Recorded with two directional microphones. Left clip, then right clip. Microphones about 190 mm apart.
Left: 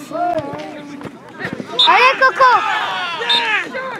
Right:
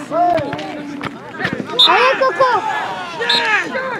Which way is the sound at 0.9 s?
Centre (ahead or behind).